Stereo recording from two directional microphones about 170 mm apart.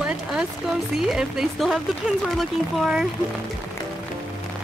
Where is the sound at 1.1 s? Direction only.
Centre (ahead or behind).